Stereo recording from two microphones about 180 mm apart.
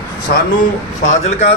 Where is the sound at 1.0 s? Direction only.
35° left (ahead or behind).